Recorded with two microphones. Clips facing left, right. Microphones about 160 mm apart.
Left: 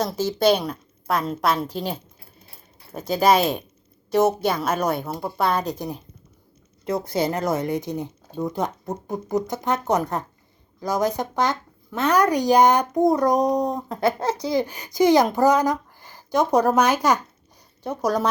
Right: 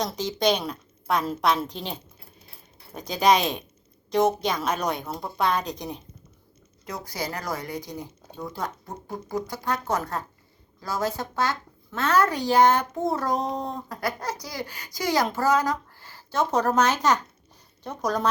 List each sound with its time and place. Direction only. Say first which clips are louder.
0.0 s a woman's voice: left 4 dB; 5° left (ahead or behind)
6.8 s speech: left 10 dB; 25° left (ahead or behind); by 18.3 s 10° left (ahead or behind)